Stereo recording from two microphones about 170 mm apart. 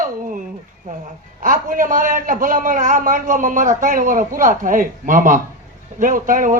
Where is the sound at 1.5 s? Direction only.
50° right (ahead or behind).